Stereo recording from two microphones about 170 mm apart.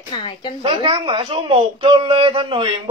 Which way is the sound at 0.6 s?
30° right (ahead or behind).